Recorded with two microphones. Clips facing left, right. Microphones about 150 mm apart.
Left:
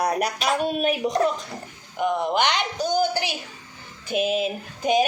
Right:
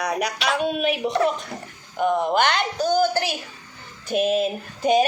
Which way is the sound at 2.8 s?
15° left (ahead or behind).